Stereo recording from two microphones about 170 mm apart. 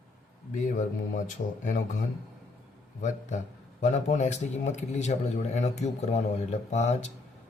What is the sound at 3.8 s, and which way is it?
A man's voice, 45° left (ahead or behind).